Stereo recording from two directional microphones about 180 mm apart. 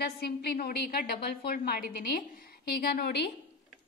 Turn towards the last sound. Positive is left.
turn(degrees=60)  # may be behind; listen again after turning